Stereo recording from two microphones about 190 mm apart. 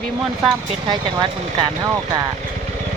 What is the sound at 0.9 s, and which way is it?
Speech, 25° right (ahead or behind).